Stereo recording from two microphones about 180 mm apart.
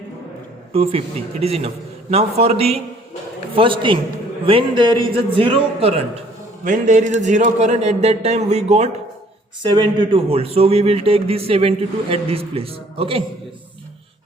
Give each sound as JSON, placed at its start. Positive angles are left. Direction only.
{"t": 0.7, "sound": "a man's voice", "side_deg": -30}
{"t": 6.7, "sound": "a man's voice", "side_deg": -45}
{"t": 9.6, "sound": "a man's voice", "side_deg": -25}